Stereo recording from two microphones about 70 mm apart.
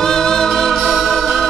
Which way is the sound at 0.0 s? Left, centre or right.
Centre.